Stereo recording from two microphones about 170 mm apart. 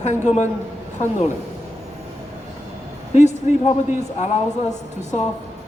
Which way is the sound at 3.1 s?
45° left (ahead or behind).